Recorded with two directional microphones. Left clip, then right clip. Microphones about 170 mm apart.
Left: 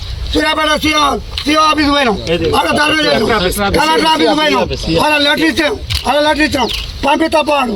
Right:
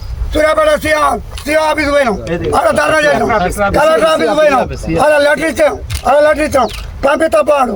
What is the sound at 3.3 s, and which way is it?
Speech, 75° right (ahead or behind).